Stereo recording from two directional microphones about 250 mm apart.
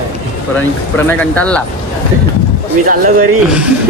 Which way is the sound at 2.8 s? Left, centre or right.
Right.